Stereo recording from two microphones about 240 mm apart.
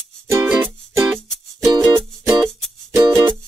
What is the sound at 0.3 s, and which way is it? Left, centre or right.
Music, centre.